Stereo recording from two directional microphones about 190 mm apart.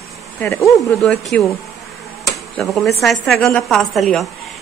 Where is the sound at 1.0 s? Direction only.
Centre (ahead or behind).